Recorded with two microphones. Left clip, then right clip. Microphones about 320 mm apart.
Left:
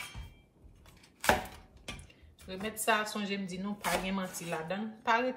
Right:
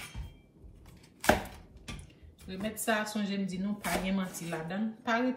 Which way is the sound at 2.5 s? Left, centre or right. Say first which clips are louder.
Left 1 dB; centre.